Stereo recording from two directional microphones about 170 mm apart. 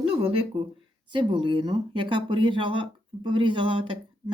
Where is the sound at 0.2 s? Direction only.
35° right (ahead or behind).